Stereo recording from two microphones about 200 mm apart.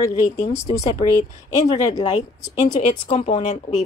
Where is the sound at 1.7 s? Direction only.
20° left (ahead or behind).